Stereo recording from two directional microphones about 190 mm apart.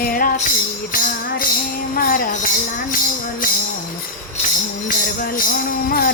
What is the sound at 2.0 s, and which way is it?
Music, 50° left (ahead or behind).